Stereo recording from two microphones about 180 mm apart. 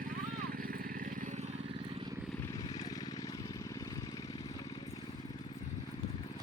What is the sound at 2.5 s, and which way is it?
Vehicle, 20° left (ahead or behind).